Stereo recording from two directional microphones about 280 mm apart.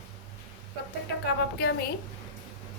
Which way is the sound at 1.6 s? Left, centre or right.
Left.